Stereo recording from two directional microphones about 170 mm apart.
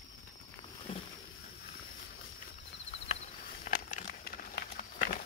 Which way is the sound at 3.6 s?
50° left (ahead or behind).